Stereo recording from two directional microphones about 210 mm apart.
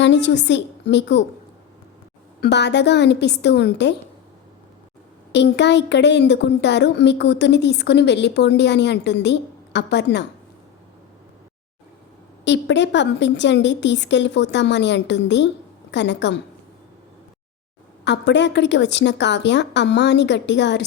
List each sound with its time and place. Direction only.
0.0 s a woman's voice: 55° left (ahead or behind)
2.4 s a woman's voice: 55° left (ahead or behind)
5.3 s a woman's voice: 55° left (ahead or behind)
12.5 s a woman's voice: 55° left (ahead or behind)
18.0 s a woman's voice: 55° left (ahead or behind)